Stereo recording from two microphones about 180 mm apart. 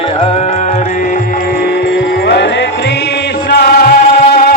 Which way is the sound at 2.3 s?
70° left (ahead or behind).